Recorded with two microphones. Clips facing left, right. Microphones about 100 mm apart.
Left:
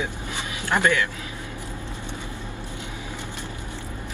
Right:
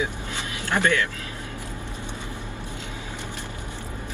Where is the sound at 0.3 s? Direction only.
15° left (ahead or behind).